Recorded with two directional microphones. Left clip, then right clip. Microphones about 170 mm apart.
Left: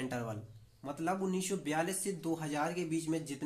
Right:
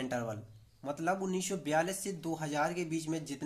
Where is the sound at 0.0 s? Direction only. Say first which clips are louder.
Right 3 dB; 25° right (ahead or behind).